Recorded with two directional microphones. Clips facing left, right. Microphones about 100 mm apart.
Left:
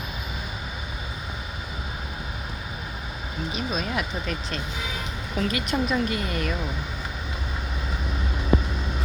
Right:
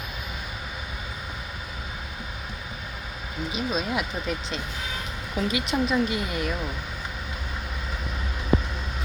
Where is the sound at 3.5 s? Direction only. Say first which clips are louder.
Right 1 dB; 20° right (ahead or behind).